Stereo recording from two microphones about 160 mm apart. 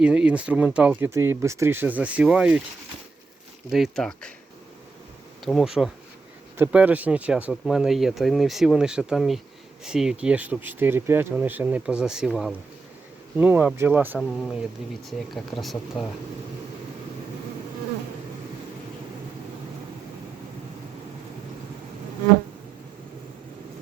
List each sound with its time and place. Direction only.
0.0 s speech: 5° right (ahead or behind)
3.7 s speech: centre (ahead or behind)
5.5 s speech: centre (ahead or behind)
14.2 s speech: centre (ahead or behind)
15.6 s speech: centre (ahead or behind)